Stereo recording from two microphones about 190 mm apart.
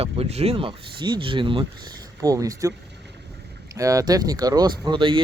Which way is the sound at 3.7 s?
15° right (ahead or behind).